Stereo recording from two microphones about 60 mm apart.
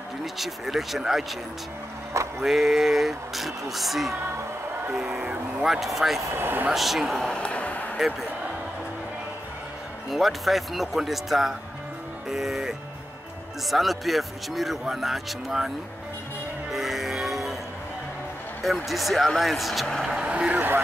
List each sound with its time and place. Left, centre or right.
0.2 s speech: centre
2.4 s speech: centre
4.9 s speech: centre
6.3 s speech: right
6.7 s speech: centre
7.2 s a sound: centre
10.0 s speech: centre
12.3 s music: centre
13.7 s speech: centre
16.7 s music: centre
18.9 s speech: centre
20.2 s vehicle: centre